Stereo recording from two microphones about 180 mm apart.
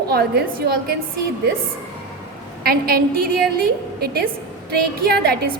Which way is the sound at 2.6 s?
55° right (ahead or behind).